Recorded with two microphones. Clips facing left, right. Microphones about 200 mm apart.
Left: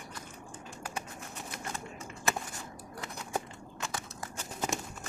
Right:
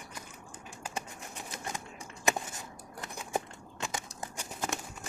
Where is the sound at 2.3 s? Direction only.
15° right (ahead or behind).